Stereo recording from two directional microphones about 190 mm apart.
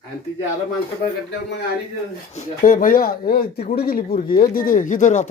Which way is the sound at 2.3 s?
40° left (ahead or behind).